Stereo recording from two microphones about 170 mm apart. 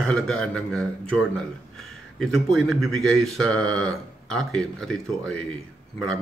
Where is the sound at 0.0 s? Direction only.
5° left (ahead or behind).